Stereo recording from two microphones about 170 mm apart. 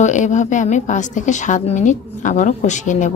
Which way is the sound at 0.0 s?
45° left (ahead or behind).